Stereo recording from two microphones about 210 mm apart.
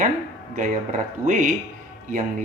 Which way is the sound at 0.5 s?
40° right (ahead or behind).